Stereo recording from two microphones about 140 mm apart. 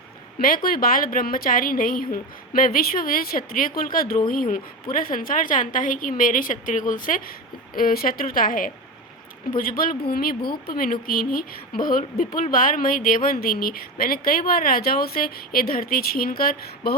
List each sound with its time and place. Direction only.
0.3 s speech: 90° left
4.3 s a woman's voice: 75° left (ahead or behind)
7.8 s speech: 90° left